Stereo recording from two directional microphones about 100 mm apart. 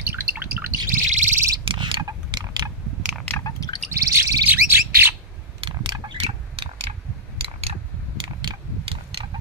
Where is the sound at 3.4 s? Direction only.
40° left (ahead or behind).